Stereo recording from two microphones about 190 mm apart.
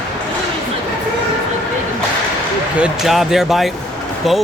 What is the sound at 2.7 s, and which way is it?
Speech, 5° right (ahead or behind).